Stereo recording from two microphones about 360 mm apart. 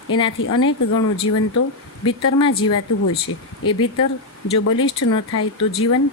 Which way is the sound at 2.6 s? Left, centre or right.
Left.